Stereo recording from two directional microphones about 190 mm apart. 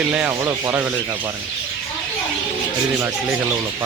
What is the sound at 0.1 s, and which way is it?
Sanding, 10° right (ahead or behind).